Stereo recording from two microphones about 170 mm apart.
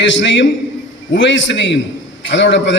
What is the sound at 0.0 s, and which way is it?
A man's voice, 90° left.